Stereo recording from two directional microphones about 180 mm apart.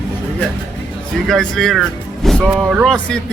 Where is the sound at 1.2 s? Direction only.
Centre (ahead or behind).